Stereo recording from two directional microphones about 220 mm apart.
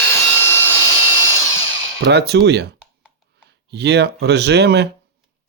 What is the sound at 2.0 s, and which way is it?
Speech, 50° right (ahead or behind).